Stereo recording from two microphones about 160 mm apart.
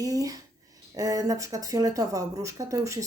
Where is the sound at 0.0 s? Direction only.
20° right (ahead or behind).